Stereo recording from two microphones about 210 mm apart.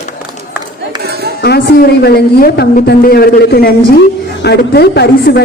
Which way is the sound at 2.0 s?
50° left (ahead or behind).